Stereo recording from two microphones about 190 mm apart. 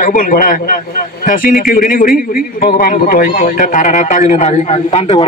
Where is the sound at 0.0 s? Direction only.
45° left (ahead or behind).